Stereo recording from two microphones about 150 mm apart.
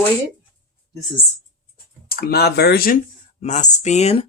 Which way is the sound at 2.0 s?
85° left.